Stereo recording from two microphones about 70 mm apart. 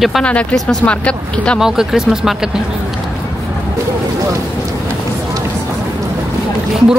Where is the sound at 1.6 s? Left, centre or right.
Centre.